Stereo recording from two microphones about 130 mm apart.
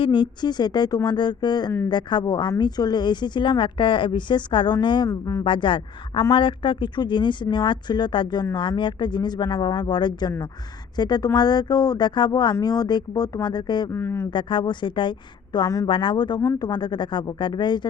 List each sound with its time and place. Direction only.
0.0 s a woman's voice: 40° left (ahead or behind)
5.0 s speech: 25° left (ahead or behind)
5.5 s a woman's voice: 40° left (ahead or behind)
13.9 s speech: 20° left (ahead or behind)
14.3 s a woman's voice: 35° left (ahead or behind)